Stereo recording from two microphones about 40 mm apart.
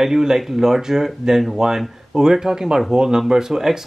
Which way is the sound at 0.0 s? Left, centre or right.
Centre.